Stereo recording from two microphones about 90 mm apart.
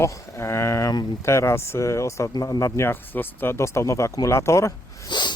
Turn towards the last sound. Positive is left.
turn(degrees=55)  # may be behind; listen again after turning